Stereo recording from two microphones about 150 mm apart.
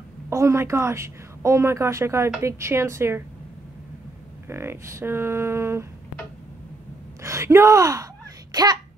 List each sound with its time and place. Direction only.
0.3 s a woman's voice: 20° right (ahead or behind)
4.5 s speech: 15° right (ahead or behind)
7.2 s speech: 20° right (ahead or behind)